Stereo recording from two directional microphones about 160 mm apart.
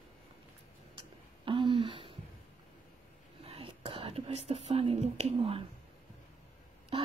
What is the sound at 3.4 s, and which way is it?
Whispering, 40° right (ahead or behind).